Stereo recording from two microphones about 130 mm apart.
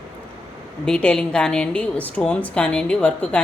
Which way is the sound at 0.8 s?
5° left (ahead or behind).